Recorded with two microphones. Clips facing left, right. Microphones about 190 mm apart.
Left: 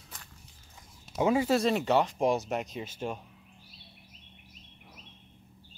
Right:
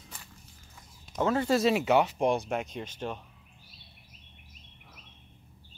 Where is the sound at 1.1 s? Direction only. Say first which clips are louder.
Left 1 dB; 10° left (ahead or behind).